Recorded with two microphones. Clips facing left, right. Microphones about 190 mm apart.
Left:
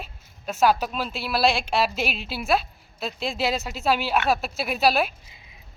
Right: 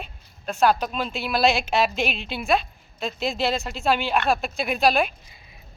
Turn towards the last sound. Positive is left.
turn(degrees=5)  # may be behind; listen again after turning